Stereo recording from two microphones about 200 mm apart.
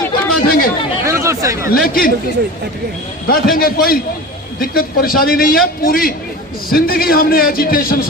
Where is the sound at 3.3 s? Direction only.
45° left (ahead or behind).